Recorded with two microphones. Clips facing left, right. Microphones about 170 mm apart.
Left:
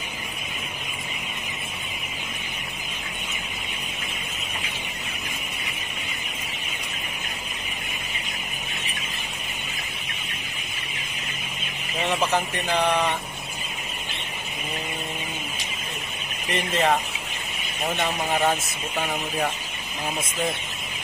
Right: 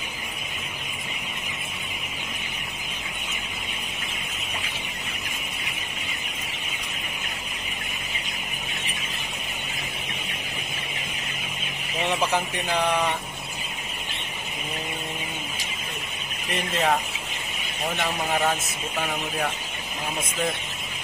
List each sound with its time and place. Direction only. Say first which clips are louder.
16.7 s speech: left 1 dB; centre (ahead or behind)